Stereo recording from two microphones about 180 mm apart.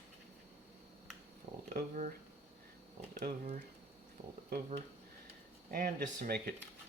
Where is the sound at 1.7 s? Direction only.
45° right (ahead or behind).